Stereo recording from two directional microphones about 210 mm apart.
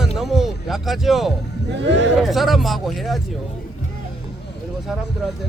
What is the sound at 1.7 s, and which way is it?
Speech, 55° right (ahead or behind).